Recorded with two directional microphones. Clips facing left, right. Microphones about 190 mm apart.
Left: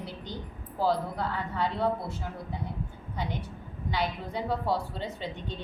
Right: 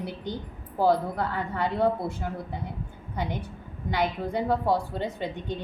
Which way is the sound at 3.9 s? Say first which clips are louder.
Right 5 dB; 55° right (ahead or behind).